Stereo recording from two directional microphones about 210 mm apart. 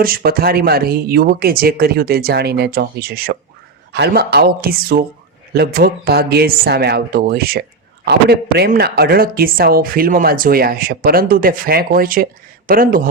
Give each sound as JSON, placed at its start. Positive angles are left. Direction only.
{"t": 0.0, "sound": "a woman's voice", "side_deg": -45}